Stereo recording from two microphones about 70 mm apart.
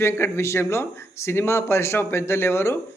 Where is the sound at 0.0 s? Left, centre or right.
Left.